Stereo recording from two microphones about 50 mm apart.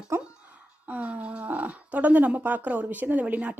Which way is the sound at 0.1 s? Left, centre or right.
Right.